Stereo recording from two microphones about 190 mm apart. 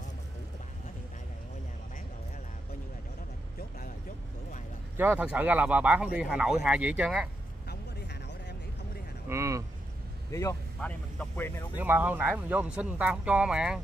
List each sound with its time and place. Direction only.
4.9 s speech: 10° right (ahead or behind)
7.6 s vehicle: 60° left (ahead or behind)
9.3 s vehicle: 15° right (ahead or behind)
10.3 s speech: 15° left (ahead or behind)
11.7 s speech: 10° right (ahead or behind)